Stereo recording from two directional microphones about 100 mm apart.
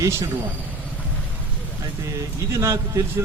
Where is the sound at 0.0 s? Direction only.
30° right (ahead or behind).